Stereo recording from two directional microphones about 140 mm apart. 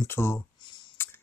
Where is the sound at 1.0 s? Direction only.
15° left (ahead or behind).